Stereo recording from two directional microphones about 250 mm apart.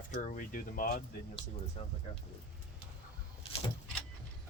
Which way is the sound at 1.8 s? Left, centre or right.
Left.